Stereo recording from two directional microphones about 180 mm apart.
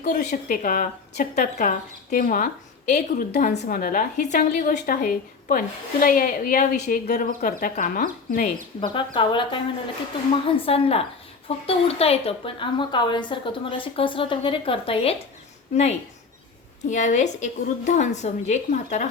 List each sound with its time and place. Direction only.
0.0 s a woman's voice: 45° left (ahead or behind)
8.8 s a woman's voice: 30° left (ahead or behind)
10.7 s a woman's voice: 35° left (ahead or behind)